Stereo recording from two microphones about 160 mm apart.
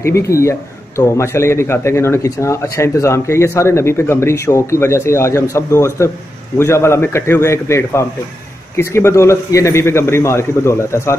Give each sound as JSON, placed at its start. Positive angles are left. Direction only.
{"t": 0.0, "sound": "a man's voice", "side_deg": 20}